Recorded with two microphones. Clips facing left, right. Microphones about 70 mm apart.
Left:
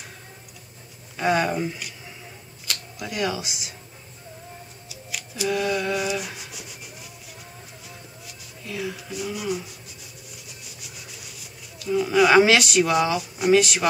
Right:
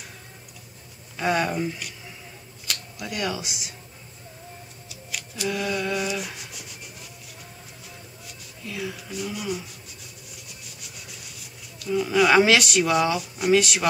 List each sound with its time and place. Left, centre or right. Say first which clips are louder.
1.1 s speech: left 2 dB; centre
4.8 s a sound: even; centre
8.3 s speech: left 2 dB; centre
10.3 s writing: left 1 dB; centre